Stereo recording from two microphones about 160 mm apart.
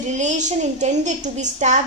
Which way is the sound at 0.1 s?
50° right (ahead or behind).